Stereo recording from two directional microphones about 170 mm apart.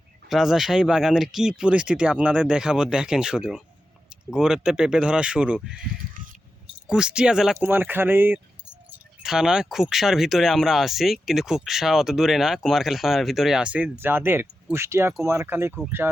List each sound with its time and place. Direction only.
0.3 s speech: centre (ahead or behind)
6.8 s speech: 5° right (ahead or behind)